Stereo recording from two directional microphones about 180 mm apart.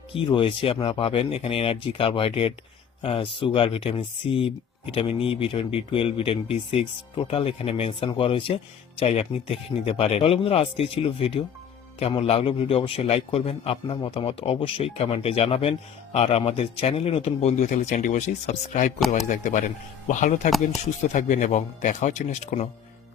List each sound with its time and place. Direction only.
0.1 s speech: 30° left (ahead or behind)
18.9 s speech: centre (ahead or behind)
19.3 s speech: 45° left (ahead or behind)